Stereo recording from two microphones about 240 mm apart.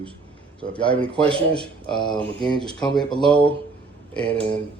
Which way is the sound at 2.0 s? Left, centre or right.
Centre.